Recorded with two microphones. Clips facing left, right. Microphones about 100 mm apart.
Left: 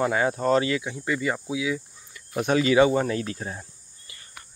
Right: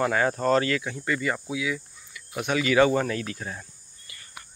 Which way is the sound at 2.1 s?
35° left (ahead or behind).